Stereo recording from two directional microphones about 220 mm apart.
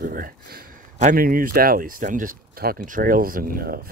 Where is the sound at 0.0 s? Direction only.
40° right (ahead or behind).